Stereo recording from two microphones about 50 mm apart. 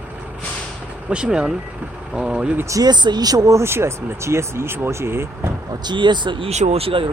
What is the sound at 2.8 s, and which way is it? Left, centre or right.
Speech, right.